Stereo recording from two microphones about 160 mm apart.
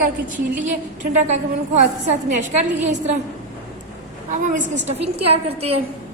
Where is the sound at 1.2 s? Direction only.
45° right (ahead or behind).